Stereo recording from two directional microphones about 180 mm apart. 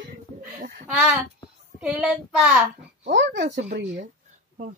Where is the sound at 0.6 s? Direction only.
50° right (ahead or behind).